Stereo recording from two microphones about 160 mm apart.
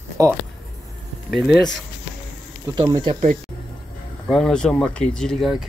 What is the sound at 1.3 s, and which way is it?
Speech, centre (ahead or behind).